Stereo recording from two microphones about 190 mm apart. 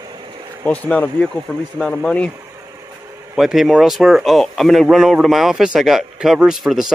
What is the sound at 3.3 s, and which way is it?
Speech, centre (ahead or behind).